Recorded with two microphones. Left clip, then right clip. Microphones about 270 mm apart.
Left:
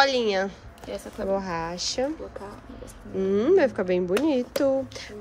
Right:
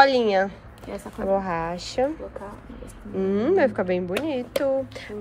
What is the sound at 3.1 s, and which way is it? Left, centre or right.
Speech, centre.